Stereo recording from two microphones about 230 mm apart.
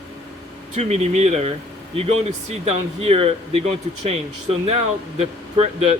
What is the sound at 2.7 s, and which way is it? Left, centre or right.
Speech, right.